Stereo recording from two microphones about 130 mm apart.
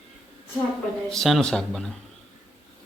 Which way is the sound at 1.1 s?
5° left (ahead or behind).